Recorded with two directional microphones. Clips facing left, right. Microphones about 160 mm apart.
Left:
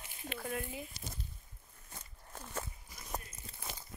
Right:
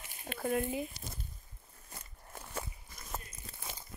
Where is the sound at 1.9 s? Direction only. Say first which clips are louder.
Right 1 dB; 5° right (ahead or behind).